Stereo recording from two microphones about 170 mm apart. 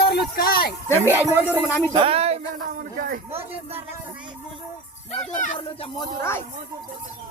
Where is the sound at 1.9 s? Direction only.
35° right (ahead or behind).